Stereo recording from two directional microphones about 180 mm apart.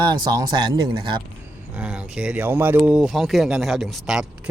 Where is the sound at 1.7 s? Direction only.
5° right (ahead or behind).